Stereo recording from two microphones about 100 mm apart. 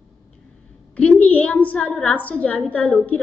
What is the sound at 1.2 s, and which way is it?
A woman's voice, 15° left (ahead or behind).